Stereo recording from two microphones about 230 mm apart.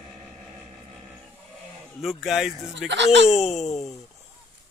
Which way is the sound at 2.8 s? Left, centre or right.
Right.